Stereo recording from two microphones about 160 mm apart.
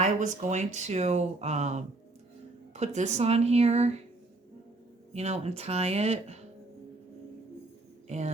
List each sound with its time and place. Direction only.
0.0 s speech: 45° right (ahead or behind)
5.1 s speech: 40° right (ahead or behind)
8.0 s speech: 45° right (ahead or behind)